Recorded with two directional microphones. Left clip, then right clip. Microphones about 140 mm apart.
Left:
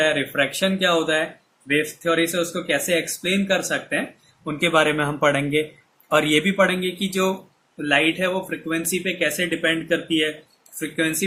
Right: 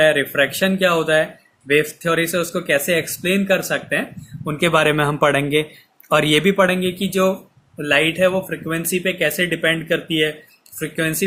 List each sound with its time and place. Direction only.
0.0 s speech: 65° right (ahead or behind)
7.8 s speech: 85° right